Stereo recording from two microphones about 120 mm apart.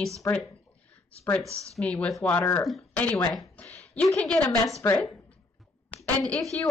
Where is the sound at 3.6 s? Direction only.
10° left (ahead or behind).